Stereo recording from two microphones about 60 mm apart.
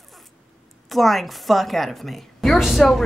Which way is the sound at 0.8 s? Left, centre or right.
Centre.